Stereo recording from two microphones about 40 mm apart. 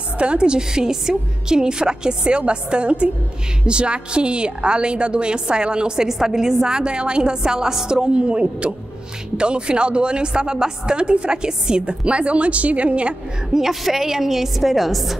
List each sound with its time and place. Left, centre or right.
0.2 s a woman's voice: right
6.0 s a woman's voice: centre; by 13.1 s right
13.5 s a woman's voice: centre